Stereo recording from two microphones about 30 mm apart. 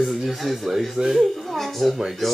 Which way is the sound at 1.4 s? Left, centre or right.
Centre.